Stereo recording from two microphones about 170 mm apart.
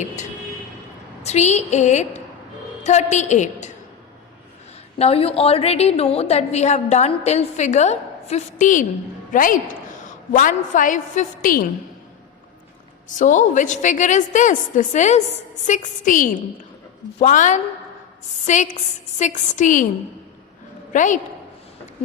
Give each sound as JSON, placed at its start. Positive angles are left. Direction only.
{"t": 1.2, "sound": "a woman's voice", "side_deg": 40}
{"t": 4.9, "sound": "a woman's voice", "side_deg": 35}
{"t": 13.1, "sound": "a woman's voice", "side_deg": 45}
{"t": 20.9, "sound": "a woman's voice", "side_deg": 50}